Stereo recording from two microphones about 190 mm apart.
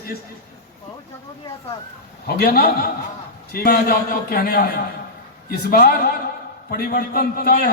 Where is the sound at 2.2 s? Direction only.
55° left (ahead or behind).